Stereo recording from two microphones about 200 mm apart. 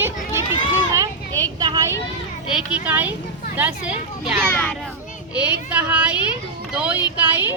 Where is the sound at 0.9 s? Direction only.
20° right (ahead or behind).